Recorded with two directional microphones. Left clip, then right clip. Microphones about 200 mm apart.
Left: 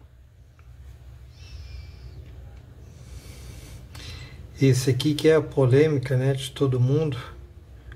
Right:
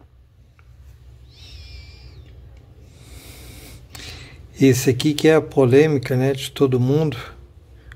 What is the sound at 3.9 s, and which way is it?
Speech, 45° right (ahead or behind).